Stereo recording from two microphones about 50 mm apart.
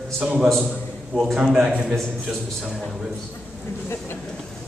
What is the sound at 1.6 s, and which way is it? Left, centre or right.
Speech, centre.